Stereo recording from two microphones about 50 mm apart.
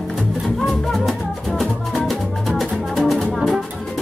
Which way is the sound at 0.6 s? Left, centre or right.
Centre.